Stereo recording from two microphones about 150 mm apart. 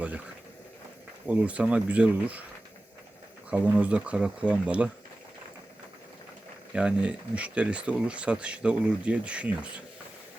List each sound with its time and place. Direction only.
1.3 s speech: 10° right (ahead or behind)
3.5 s speech: 10° right (ahead or behind)
6.7 s speech: 5° right (ahead or behind)